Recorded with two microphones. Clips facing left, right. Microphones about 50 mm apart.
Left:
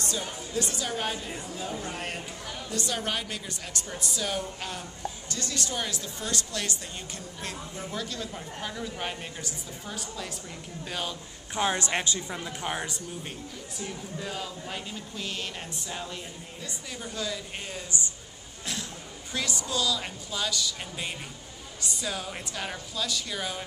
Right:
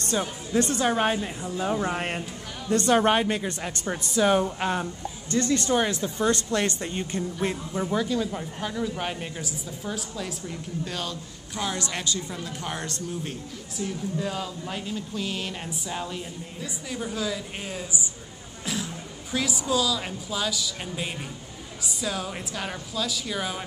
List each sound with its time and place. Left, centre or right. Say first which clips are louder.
0.6 s a woman's voice: right 9 dB; right
7.9 s a woman's voice: right 9 dB; centre
10.9 s a man's voice: left 2 dB; centre
11.5 s speech: left 3 dB; left; by 13.3 s centre
13.7 s a woman's voice: right 8 dB; centre
19.3 s a woman's voice: right 5 dB; centre